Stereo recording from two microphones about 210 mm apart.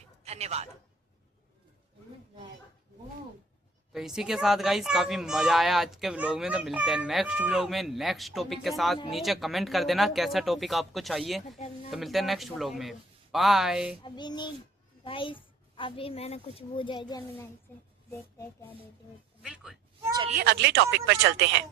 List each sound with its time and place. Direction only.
0.3 s a man's voice: 30° right (ahead or behind)
3.9 s speech: centre (ahead or behind)
14.0 s a woman's voice: 20° left (ahead or behind)
19.4 s speech: 5° right (ahead or behind)
20.0 s speech: 20° right (ahead or behind)
20.3 s speech: 50° right (ahead or behind)